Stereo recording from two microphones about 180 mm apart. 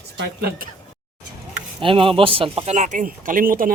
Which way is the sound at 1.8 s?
30° right (ahead or behind).